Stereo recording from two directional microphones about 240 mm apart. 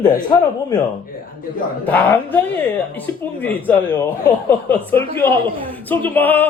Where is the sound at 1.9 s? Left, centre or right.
Centre.